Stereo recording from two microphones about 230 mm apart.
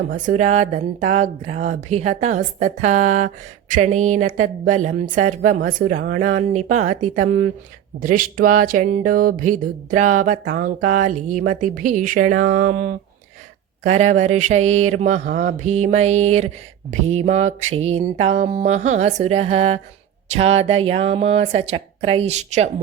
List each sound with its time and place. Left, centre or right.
0.1 s speech: right
10.8 s speech: right
11.0 s speech: right
13.8 s mantra: right